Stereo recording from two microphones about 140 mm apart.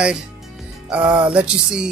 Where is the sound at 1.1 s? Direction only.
35° right (ahead or behind).